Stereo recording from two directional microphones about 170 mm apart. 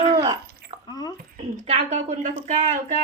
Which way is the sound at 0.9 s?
25° left (ahead or behind).